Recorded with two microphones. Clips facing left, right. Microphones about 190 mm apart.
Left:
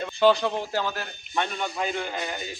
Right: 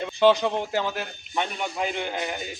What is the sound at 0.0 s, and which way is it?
A man's voice, 15° right (ahead or behind).